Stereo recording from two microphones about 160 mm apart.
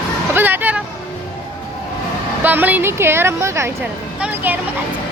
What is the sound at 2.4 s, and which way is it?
A woman's voice, 10° right (ahead or behind).